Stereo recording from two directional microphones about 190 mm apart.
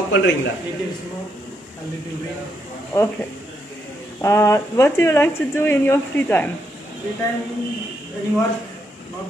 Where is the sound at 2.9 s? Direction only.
15° left (ahead or behind).